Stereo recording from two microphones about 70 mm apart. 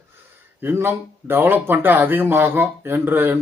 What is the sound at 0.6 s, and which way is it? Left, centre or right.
Speech, right.